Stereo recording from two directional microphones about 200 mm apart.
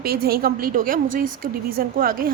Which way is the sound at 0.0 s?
50° right (ahead or behind).